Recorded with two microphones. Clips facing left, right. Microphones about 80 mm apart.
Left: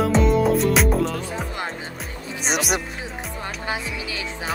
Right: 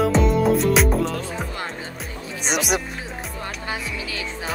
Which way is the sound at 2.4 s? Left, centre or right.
Centre.